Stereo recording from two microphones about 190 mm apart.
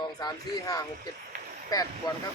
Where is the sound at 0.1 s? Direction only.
20° left (ahead or behind).